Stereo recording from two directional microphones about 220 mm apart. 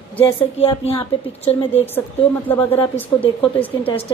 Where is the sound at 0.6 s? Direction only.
25° left (ahead or behind).